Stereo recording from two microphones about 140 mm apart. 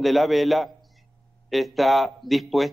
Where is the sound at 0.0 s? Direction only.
Centre (ahead or behind).